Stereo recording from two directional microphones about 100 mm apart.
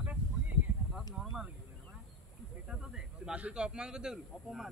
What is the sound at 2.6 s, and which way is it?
Speech, 5° right (ahead or behind).